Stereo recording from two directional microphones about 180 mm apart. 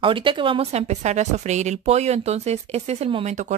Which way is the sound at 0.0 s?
30° right (ahead or behind).